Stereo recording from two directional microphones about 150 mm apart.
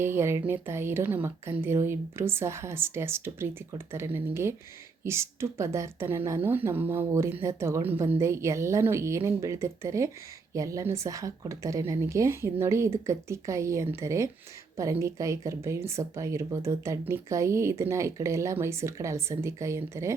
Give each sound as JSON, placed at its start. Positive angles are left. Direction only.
{"t": 0.0, "sound": "a woman's voice", "side_deg": -15}